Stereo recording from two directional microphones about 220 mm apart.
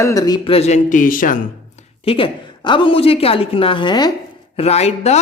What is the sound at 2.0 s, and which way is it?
A woman's voice, 25° left (ahead or behind).